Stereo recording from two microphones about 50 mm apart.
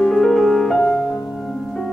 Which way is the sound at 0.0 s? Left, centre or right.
Centre.